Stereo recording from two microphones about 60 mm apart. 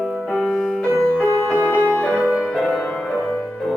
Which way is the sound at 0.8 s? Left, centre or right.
Centre.